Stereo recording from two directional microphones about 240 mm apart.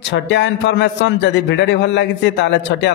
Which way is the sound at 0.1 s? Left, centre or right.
Left.